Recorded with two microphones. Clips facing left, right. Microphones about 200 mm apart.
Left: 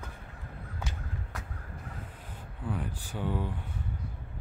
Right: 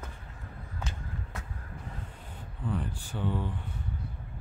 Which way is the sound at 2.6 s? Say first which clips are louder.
Right 2 dB; 10° left (ahead or behind).